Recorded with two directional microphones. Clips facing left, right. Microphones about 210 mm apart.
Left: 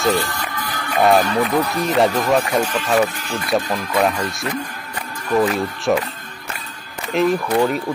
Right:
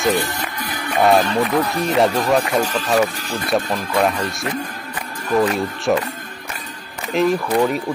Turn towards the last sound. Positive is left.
turn(degrees=0)  # may be behind; listen again after turning